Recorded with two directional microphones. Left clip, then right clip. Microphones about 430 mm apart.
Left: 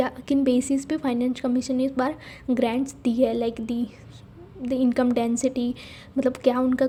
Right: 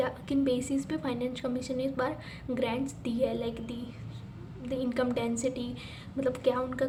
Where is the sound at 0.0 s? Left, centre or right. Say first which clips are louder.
Left 6 dB; left.